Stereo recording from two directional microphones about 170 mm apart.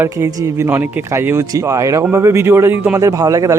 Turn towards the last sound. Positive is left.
turn(degrees=-20)  # may be behind; listen again after turning